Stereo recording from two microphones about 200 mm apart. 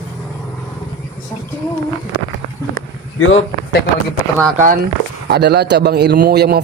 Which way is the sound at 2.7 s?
80° left.